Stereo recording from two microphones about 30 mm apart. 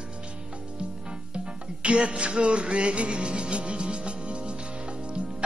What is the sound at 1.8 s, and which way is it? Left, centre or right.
Music, right.